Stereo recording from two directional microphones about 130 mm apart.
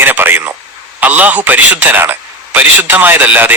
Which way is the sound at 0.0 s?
15° right (ahead or behind).